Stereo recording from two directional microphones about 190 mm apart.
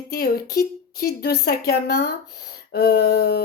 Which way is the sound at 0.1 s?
55° left (ahead or behind).